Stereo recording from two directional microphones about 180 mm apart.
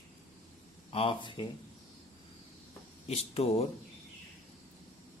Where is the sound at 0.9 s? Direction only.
30° left (ahead or behind).